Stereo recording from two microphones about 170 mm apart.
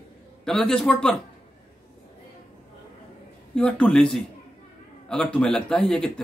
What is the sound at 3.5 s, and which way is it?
A man's voice, 5° left (ahead or behind).